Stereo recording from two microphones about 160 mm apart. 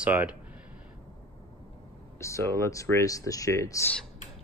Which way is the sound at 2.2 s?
20° left (ahead or behind).